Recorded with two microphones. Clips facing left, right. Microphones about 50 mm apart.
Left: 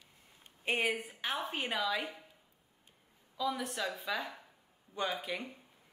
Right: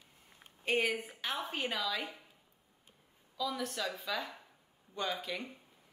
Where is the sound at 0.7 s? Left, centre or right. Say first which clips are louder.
Right 1 dB; left.